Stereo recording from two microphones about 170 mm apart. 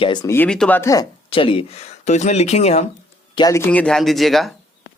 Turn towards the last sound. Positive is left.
turn(degrees=0)  # may be behind; listen again after turning